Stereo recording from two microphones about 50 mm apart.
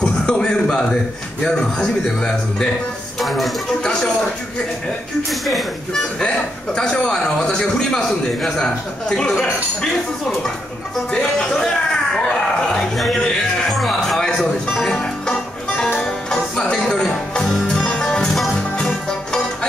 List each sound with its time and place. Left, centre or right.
0.0 s a sound: left
1.4 s a man's voice: centre
3.2 s speech: centre
3.8 s a man's voice: centre
5.3 s speech: centre
6.1 s a man's voice: centre
11.1 s a man's voice: centre
12.9 s speech: centre
13.7 s music: centre
18.3 s music: centre
18.8 s music: centre